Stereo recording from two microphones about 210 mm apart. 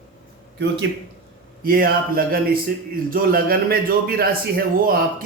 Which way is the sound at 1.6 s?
45° right (ahead or behind).